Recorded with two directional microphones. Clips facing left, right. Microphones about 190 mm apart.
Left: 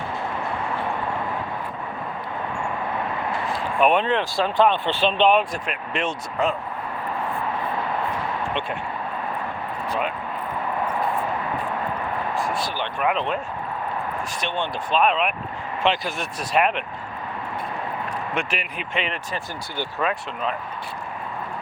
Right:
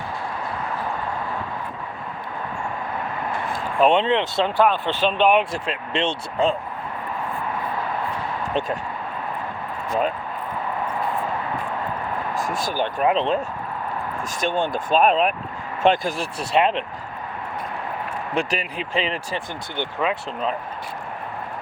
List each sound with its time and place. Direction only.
3.8 s speech: 25° right (ahead or behind)
4.5 s speech: 10° right (ahead or behind)
5.4 s speech: 25° right (ahead or behind)
12.3 s speech: 45° right (ahead or behind)
13.1 s speech: 30° right (ahead or behind)
14.4 s speech: 45° right (ahead or behind)
16.1 s speech: 30° right (ahead or behind)
18.3 s speech: 35° right (ahead or behind)